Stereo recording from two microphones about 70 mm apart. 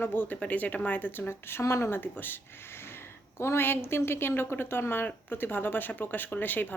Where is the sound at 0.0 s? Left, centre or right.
Left.